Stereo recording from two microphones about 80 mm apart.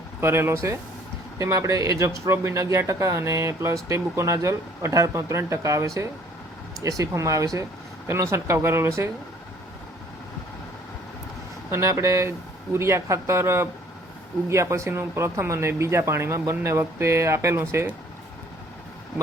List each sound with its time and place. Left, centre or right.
0.2 s speech: right
11.7 s speech: right